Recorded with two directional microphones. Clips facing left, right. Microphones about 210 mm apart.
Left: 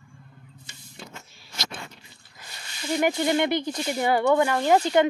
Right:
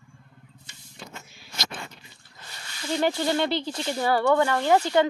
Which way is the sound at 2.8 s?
15° left (ahead or behind).